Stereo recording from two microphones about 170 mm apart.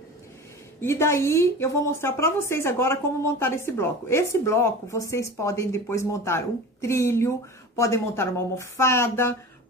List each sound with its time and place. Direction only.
0.7 s a woman's voice: 15° left (ahead or behind)